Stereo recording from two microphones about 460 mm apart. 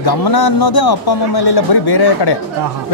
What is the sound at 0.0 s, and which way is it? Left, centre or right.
Speech, left.